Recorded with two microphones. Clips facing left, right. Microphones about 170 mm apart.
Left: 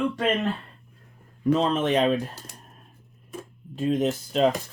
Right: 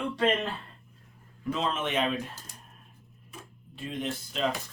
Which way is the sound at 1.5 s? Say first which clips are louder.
Left 8 dB; 40° left (ahead or behind).